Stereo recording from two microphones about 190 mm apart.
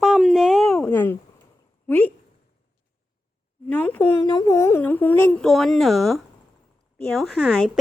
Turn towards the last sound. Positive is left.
turn(degrees=0)  # may be behind; listen again after turning